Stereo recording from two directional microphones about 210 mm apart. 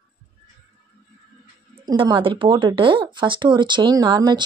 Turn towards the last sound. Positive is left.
turn(degrees=-20)  # may be behind; listen again after turning